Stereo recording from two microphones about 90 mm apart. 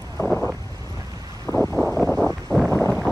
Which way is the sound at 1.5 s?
35° left (ahead or behind).